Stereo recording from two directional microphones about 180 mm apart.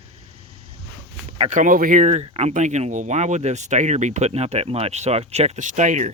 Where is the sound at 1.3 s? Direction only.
40° right (ahead or behind).